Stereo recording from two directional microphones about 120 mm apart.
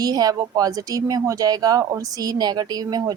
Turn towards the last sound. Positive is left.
turn(degrees=-35)  # may be behind; listen again after turning